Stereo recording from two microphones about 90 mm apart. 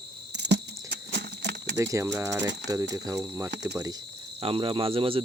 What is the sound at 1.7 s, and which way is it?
Speech, 35° right (ahead or behind).